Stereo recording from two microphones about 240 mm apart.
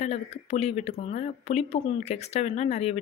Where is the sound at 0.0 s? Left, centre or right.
Left.